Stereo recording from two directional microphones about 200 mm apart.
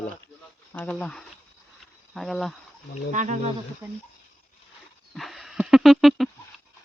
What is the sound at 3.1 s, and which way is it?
Speech, 35° right (ahead or behind).